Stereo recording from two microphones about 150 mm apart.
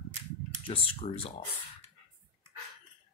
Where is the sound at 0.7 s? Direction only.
40° left (ahead or behind).